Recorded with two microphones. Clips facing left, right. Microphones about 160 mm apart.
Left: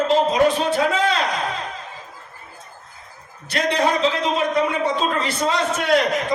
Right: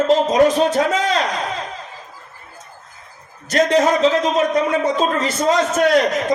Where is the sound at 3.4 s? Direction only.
40° right (ahead or behind).